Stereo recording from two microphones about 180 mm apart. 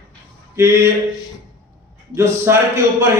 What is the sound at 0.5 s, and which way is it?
Speech, 15° right (ahead or behind).